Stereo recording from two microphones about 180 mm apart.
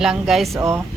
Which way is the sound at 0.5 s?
15° right (ahead or behind).